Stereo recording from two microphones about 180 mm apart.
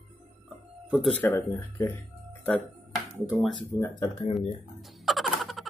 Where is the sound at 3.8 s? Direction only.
25° left (ahead or behind).